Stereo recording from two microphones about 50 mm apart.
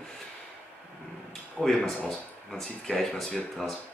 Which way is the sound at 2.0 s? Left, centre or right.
Centre.